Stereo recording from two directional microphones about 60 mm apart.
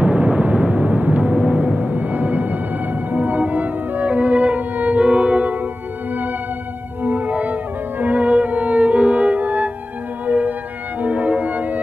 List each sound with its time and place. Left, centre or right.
0.0 s music: right
7.0 s music: right